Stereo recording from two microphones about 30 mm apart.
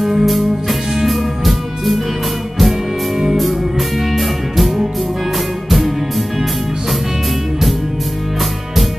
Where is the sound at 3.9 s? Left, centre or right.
Centre.